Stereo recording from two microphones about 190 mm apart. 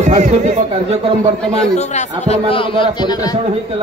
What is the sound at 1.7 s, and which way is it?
A man's voice, 35° left (ahead or behind).